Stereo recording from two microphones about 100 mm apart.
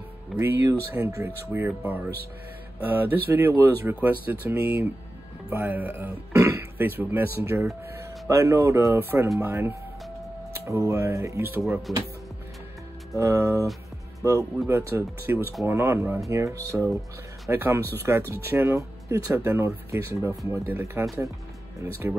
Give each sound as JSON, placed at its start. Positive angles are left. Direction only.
{"t": 0.4, "sound": "speech", "side_deg": -25}
{"t": 2.8, "sound": "speech", "side_deg": -20}
{"t": 11.9, "sound": "speech", "side_deg": 0}
{"t": 13.1, "sound": "speech", "side_deg": -30}
{"t": 14.7, "sound": "speech", "side_deg": -25}